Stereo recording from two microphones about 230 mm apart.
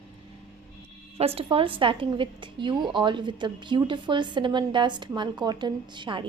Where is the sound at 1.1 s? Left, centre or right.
Right.